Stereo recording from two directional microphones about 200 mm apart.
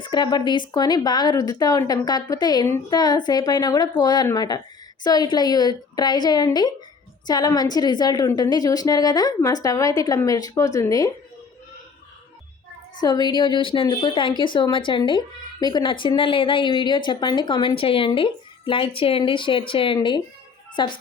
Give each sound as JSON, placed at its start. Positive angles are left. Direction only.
{"t": 0.0, "sound": "a woman's voice", "side_deg": 20}
{"t": 13.0, "sound": "a woman's voice", "side_deg": 20}